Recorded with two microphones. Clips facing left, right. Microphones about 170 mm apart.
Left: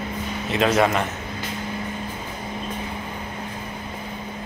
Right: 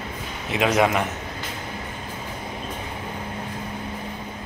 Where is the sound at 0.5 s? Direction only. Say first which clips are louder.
Left 1 dB; 10° right (ahead or behind).